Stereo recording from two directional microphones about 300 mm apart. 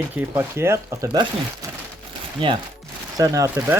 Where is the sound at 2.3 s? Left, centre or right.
Centre.